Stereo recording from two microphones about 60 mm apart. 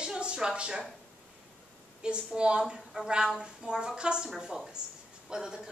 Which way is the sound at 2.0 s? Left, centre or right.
Centre.